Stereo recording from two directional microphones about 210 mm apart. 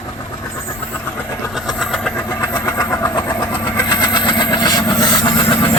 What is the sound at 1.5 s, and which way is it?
Vehicle, centre (ahead or behind).